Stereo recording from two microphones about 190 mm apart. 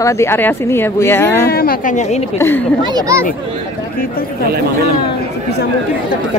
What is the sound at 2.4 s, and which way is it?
Speech, 10° left (ahead or behind).